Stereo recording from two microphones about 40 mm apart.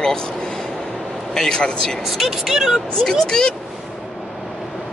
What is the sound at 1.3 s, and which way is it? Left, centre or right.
Speech, centre.